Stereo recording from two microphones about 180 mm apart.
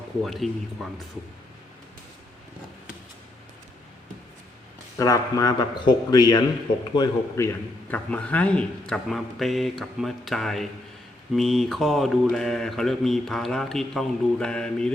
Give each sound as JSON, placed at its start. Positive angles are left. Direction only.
{"t": 0.2, "sound": "a man's voice", "side_deg": 0}
{"t": 4.9, "sound": "a man's voice", "side_deg": 20}